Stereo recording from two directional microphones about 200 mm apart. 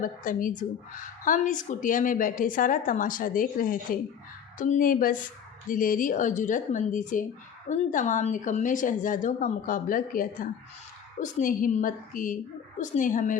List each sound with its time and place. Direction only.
0.0 s a woman's voice: 40° left (ahead or behind)